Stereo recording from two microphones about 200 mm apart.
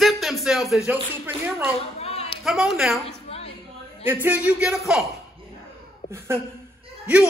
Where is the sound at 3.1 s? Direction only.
30° left (ahead or behind).